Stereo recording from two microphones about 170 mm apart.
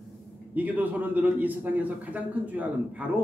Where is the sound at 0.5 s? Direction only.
10° right (ahead or behind).